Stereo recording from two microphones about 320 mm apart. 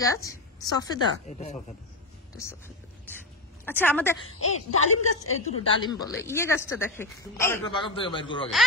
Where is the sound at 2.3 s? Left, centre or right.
Centre.